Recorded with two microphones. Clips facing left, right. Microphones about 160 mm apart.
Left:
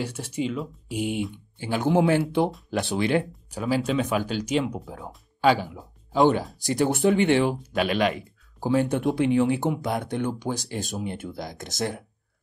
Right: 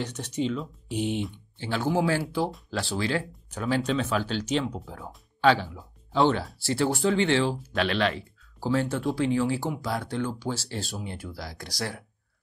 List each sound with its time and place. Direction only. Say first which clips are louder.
0.0 s speech: left 1 dB; 10° left (ahead or behind)